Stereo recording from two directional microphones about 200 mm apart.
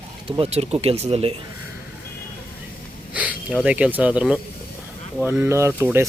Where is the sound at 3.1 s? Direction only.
5° right (ahead or behind).